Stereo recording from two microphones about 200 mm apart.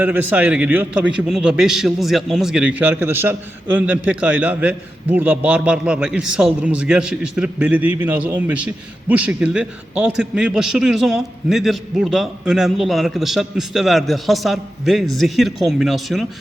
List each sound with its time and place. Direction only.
0.0 s a man's voice: 10° right (ahead or behind)